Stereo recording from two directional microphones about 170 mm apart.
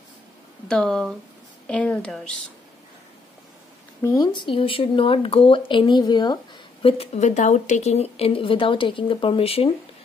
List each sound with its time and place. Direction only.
0.7 s a woman's voice: centre (ahead or behind)
4.0 s speech: 20° left (ahead or behind)